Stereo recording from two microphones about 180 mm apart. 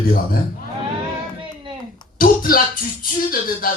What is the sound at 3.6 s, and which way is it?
Speech, 55° left (ahead or behind).